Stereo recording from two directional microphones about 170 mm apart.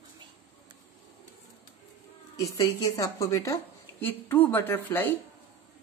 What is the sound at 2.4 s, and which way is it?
Speech, 20° left (ahead or behind).